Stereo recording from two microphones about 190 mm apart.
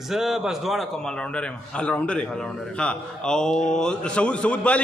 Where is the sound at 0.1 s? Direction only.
Centre (ahead or behind).